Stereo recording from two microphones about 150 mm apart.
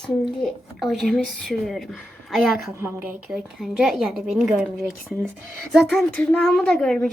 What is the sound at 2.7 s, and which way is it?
Speech, 15° right (ahead or behind).